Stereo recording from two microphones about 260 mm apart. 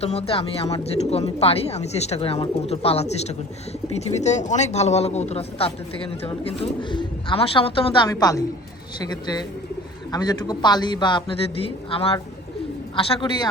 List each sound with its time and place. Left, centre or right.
0.0 s speech: left
10.1 s a man's voice: centre